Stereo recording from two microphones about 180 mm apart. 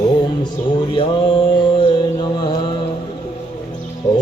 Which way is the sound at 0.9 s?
30° left (ahead or behind).